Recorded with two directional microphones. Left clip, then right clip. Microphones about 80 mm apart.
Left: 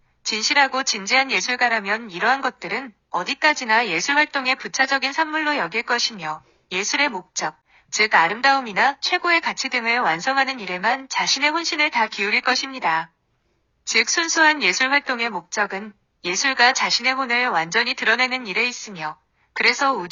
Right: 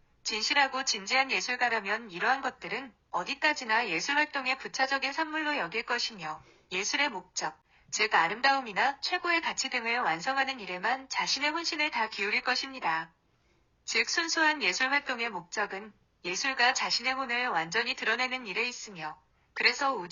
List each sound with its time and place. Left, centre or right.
0.3 s a woman's voice: left